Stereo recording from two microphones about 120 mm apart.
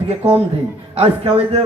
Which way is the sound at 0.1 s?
55° right (ahead or behind).